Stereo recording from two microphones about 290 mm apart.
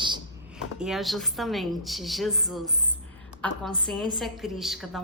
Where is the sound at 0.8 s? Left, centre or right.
Centre.